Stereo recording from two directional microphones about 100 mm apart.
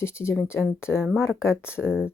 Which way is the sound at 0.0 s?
25° left (ahead or behind).